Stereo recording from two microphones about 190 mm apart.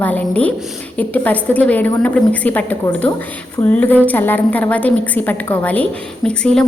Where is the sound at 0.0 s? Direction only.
10° left (ahead or behind).